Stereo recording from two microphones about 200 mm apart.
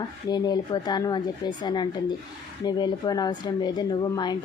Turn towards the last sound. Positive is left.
turn(degrees=20)  # may be behind; listen again after turning